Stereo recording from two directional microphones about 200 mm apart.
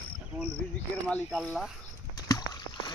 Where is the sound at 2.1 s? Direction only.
20° left (ahead or behind).